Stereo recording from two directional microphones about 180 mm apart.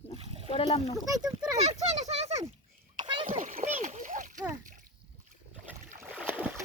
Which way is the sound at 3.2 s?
45° right (ahead or behind).